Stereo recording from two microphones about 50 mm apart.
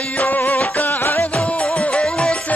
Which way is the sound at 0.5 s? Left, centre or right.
Left.